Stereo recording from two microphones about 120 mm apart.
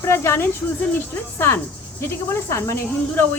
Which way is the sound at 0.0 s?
20° left (ahead or behind).